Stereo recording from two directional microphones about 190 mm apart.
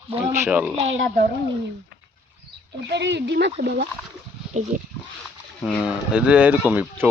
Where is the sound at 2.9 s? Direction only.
65° right (ahead or behind).